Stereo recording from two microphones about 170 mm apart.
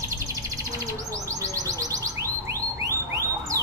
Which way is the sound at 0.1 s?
20° right (ahead or behind).